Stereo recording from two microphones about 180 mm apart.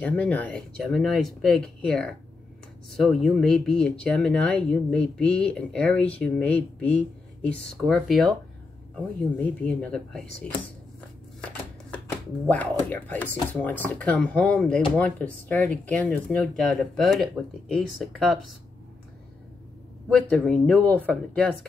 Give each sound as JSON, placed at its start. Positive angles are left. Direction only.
{"t": 0.0, "sound": "speech", "side_deg": 5}
{"t": 12.4, "sound": "speech", "side_deg": 10}
{"t": 20.1, "sound": "speech", "side_deg": 5}